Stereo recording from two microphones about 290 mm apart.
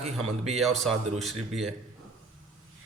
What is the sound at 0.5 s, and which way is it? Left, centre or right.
A man's voice, centre.